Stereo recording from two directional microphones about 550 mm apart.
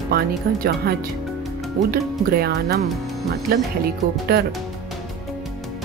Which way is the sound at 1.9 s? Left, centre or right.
Centre.